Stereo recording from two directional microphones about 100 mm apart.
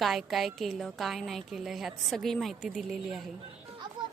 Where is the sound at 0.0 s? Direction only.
Centre (ahead or behind).